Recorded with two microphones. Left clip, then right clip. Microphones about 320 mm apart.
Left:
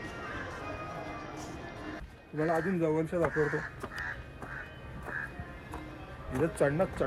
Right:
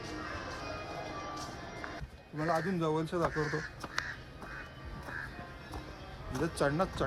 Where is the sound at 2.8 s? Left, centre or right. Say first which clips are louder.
Left 3 dB; right.